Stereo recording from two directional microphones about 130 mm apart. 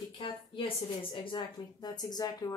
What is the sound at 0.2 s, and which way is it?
Speech, 40° left (ahead or behind).